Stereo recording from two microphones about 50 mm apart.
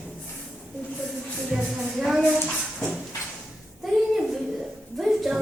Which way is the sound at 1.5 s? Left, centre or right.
Centre.